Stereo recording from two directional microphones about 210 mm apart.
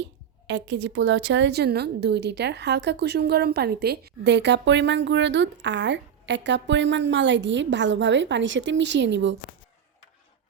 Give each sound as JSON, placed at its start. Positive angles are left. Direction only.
{"t": 0.0, "sound": "a woman's voice", "side_deg": -60}